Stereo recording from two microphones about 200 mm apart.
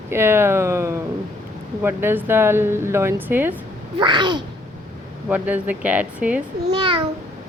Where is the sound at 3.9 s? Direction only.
25° right (ahead or behind).